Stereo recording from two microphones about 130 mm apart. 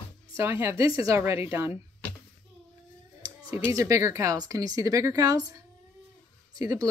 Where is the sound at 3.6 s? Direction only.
25° right (ahead or behind).